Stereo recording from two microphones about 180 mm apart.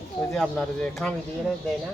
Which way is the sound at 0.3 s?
Centre (ahead or behind).